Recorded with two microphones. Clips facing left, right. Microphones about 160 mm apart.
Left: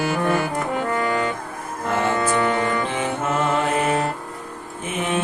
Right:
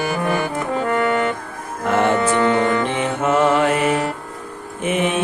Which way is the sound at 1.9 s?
70° right (ahead or behind).